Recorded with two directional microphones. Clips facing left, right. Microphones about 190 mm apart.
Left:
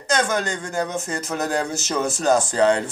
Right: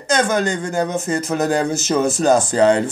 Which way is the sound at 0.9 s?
20° right (ahead or behind).